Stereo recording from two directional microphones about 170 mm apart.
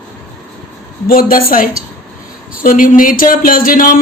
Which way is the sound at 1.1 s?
60° left (ahead or behind).